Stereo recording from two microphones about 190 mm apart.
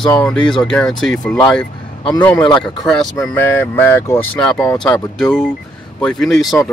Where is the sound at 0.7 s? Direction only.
5° left (ahead or behind).